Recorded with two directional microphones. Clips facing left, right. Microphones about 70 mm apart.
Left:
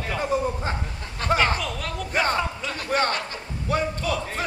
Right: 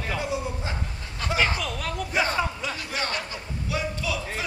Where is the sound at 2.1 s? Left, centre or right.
Left.